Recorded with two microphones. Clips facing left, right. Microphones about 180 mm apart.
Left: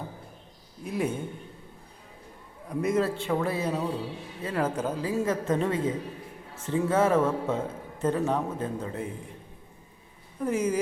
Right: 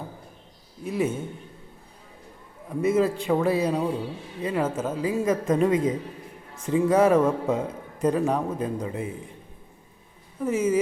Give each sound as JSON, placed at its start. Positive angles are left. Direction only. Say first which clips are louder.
{"t": 0.9, "sound": "a man's voice", "louder": "right 3 dB", "side_deg": -5}
{"t": 2.6, "sound": "a man's voice", "louder": "right 4 dB", "side_deg": -5}
{"t": 3.2, "sound": "speech", "louder": "right 5 dB", "side_deg": -20}
{"t": 4.4, "sound": "speech", "louder": "right 2 dB", "side_deg": -5}
{"t": 10.4, "sound": "a man's voice", "louder": "right 3 dB", "side_deg": -5}